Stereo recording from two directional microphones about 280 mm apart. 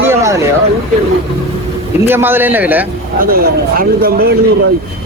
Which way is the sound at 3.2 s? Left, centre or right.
Right.